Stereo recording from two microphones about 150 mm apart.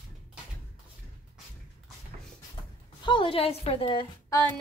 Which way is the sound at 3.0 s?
35° left (ahead or behind).